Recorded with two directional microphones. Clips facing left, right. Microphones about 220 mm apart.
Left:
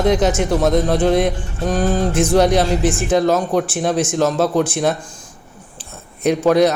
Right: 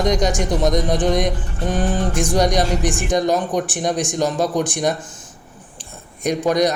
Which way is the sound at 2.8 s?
15° right (ahead or behind).